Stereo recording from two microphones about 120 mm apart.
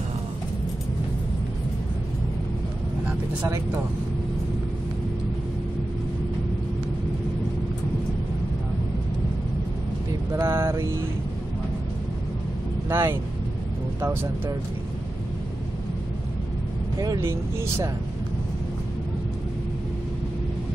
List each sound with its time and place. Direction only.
3.4 s speech: 25° right (ahead or behind)
10.3 s mantra: 20° right (ahead or behind)
12.9 s speech: 20° right (ahead or behind)
17.2 s speech: 20° right (ahead or behind)